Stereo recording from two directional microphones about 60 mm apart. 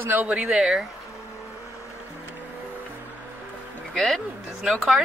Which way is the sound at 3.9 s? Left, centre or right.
Centre.